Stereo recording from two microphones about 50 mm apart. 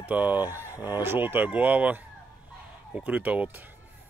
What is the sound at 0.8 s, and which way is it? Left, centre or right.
Speech, right.